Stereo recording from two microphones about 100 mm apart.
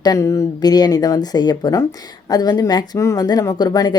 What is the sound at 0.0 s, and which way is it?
A woman's voice, 35° left (ahead or behind).